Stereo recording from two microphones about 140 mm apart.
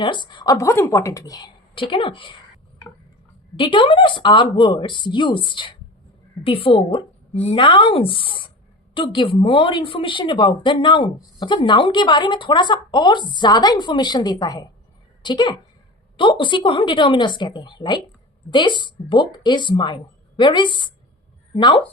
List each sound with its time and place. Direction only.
0.0 s speech: 35° left (ahead or behind)
1.7 s a woman's voice: 40° left (ahead or behind)
3.6 s a woman's voice: 40° left (ahead or behind)